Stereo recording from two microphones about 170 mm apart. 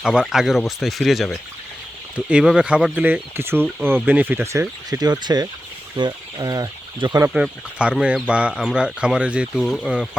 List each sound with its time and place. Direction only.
0.0 s speech: 5° right (ahead or behind)
4.9 s speech: 25° right (ahead or behind)
7.3 s speech: 5° right (ahead or behind)